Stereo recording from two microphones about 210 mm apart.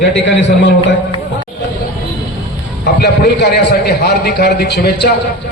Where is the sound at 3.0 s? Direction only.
50° left (ahead or behind).